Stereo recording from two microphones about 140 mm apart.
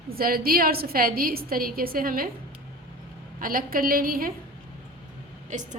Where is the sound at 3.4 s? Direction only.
90° right.